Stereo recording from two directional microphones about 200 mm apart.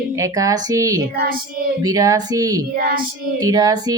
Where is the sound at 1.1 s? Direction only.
50° right (ahead or behind).